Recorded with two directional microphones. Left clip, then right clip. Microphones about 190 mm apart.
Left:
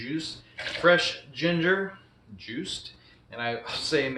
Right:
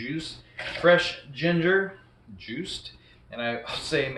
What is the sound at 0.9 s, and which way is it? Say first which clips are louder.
Speech: right 1 dB; 10° left (ahead or behind).